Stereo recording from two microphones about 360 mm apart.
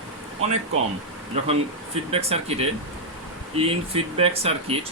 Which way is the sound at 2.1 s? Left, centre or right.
Centre.